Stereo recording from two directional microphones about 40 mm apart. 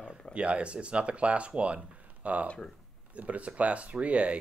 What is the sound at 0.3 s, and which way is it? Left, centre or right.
Speech, right.